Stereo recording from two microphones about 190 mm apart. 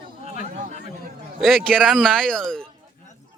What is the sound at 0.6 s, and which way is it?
Speech, 45° right (ahead or behind).